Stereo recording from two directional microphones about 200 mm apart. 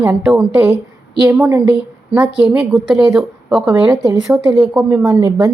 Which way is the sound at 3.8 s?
15° right (ahead or behind).